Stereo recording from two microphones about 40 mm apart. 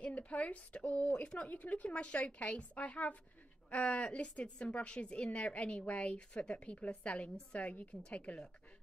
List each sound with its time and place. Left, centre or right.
0.0 s a woman's voice: left
7.3 s a woman's voice: left